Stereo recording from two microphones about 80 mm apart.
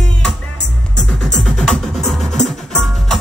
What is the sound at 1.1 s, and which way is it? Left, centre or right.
Music, centre.